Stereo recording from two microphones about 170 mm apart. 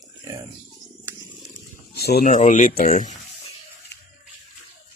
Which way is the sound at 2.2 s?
45° left (ahead or behind).